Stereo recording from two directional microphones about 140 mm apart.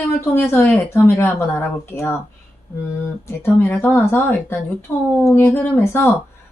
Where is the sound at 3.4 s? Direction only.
15° left (ahead or behind).